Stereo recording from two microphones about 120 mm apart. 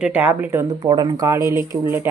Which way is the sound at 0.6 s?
40° right (ahead or behind).